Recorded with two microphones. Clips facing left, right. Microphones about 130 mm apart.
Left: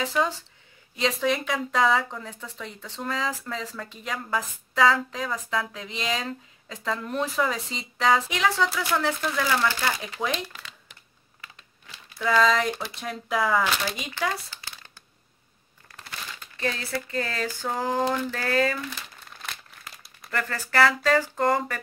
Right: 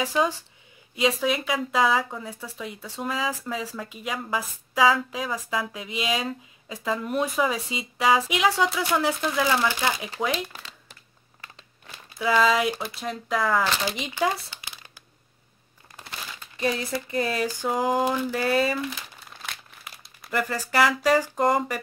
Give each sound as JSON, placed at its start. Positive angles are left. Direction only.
{"t": 0.0, "sound": "speech", "side_deg": -15}
{"t": 10.5, "sound": "crumpling", "side_deg": -35}
{"t": 12.2, "sound": "speech", "side_deg": -10}
{"t": 13.8, "sound": "speech", "side_deg": -20}
{"t": 15.9, "sound": "speech", "side_deg": -20}
{"t": 18.9, "sound": "crumpling", "side_deg": 0}
{"t": 20.2, "sound": "speech", "side_deg": -15}